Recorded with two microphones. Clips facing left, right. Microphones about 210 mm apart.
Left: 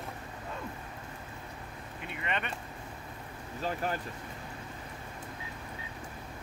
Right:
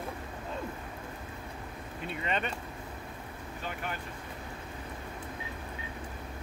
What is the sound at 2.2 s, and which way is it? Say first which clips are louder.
Vehicle: right 2 dB; 35° right (ahead or behind).